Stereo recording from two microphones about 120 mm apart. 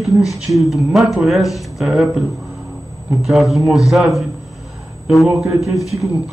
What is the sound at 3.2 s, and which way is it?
Speech, centre (ahead or behind).